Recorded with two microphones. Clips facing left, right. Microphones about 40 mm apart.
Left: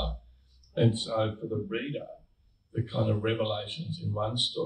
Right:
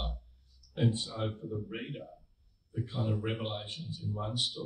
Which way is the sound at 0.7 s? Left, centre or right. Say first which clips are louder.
Left 6 dB; left.